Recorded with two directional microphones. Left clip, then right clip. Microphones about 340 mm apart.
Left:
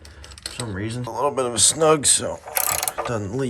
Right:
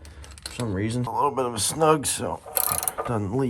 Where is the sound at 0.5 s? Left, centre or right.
Centre.